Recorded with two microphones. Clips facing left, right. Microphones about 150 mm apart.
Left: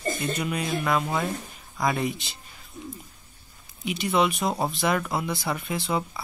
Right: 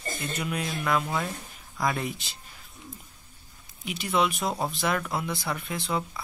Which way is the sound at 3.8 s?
Centre (ahead or behind).